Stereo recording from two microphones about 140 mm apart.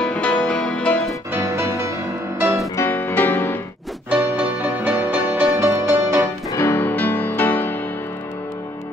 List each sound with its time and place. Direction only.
0.0 s music: 10° left (ahead or behind)
1.3 s music: 20° right (ahead or behind)
2.7 s music: 15° left (ahead or behind)
4.1 s music: 15° right (ahead or behind)
6.5 s music: 15° left (ahead or behind)